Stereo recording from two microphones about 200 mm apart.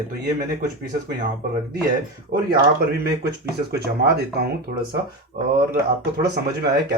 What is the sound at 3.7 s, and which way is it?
Speech, 50° right (ahead or behind).